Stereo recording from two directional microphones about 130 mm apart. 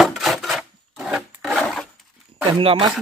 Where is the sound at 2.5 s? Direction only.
40° right (ahead or behind).